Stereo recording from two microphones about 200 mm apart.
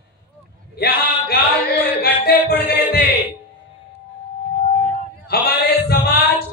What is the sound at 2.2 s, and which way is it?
Music, 50° left (ahead or behind).